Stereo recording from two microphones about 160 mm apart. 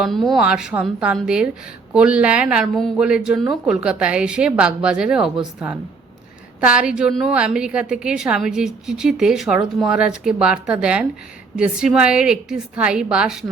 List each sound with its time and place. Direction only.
0.0 s a woman's voice: centre (ahead or behind)
6.6 s a woman's voice: 5° right (ahead or behind)